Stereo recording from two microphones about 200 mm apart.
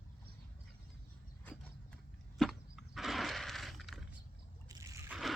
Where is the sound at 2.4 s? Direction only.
Centre (ahead or behind).